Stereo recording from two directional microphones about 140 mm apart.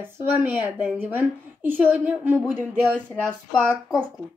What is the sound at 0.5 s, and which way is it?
A woman's voice, 10° right (ahead or behind).